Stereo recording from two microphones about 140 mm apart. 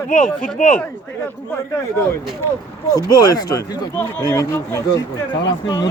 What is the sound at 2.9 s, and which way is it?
Speech, 25° left (ahead or behind).